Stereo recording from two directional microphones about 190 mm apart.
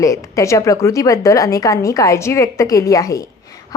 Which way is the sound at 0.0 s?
15° left (ahead or behind).